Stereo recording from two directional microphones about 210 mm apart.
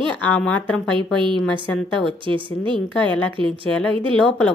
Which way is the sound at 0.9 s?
25° right (ahead or behind).